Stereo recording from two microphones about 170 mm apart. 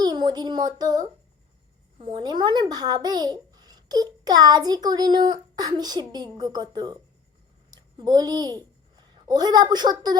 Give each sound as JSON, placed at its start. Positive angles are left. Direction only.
{"t": 0.0, "sound": "a child's voice", "side_deg": -25}